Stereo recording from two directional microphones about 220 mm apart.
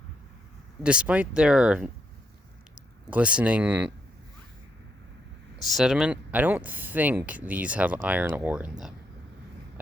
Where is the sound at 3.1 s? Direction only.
5° right (ahead or behind).